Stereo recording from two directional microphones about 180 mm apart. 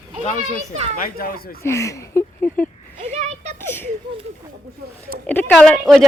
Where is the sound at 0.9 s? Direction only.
55° left (ahead or behind).